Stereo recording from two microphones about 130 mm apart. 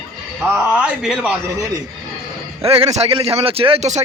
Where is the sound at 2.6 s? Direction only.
50° right (ahead or behind).